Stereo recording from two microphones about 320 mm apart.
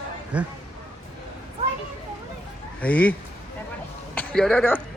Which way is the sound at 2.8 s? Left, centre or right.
Centre.